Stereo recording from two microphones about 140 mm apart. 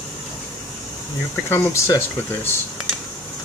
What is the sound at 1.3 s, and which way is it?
Speech, 15° left (ahead or behind).